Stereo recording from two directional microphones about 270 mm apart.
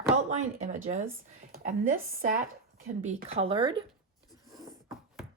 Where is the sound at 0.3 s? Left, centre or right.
Right.